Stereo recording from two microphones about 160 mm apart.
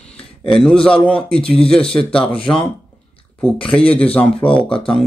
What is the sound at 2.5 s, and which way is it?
Speech, 25° left (ahead or behind).